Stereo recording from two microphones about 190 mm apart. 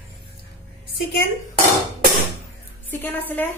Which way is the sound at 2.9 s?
10° left (ahead or behind).